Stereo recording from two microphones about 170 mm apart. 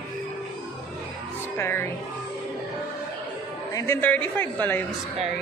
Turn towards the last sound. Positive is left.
turn(degrees=10)  # may be behind; listen again after turning